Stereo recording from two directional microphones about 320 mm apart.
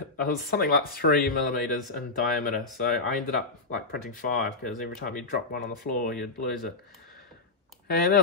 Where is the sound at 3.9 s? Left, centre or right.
Left.